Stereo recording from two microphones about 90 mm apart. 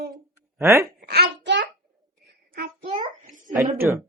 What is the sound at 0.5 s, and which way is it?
Speech, 35° right (ahead or behind).